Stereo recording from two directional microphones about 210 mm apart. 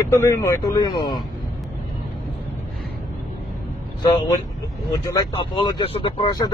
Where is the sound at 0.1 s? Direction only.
15° left (ahead or behind).